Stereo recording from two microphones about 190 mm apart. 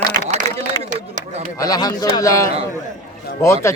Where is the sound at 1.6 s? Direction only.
20° left (ahead or behind).